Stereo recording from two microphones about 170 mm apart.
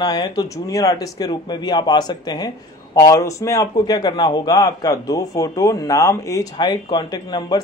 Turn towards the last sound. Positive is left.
turn(degrees=25)  # may be behind; listen again after turning